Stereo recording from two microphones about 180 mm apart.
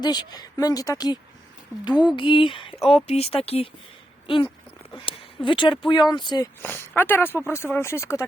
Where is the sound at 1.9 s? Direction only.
5° right (ahead or behind).